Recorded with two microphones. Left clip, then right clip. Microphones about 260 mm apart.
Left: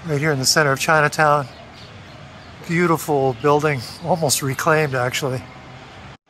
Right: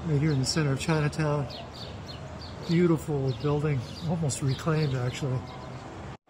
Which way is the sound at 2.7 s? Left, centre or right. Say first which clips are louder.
Left 7 dB; left.